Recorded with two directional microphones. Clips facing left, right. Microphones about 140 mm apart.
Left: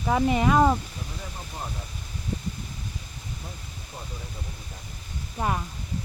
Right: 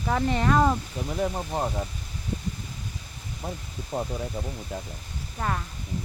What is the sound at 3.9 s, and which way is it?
Speech, 90° right.